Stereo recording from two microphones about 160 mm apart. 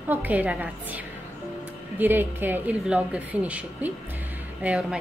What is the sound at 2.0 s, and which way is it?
A woman's voice, 10° right (ahead or behind).